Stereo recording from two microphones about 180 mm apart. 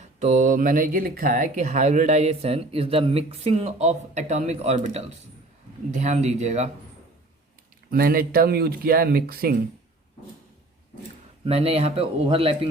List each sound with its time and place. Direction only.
0.0 s speech: 40° right (ahead or behind)
7.9 s speech: 55° right (ahead or behind)
11.4 s speech: 35° right (ahead or behind)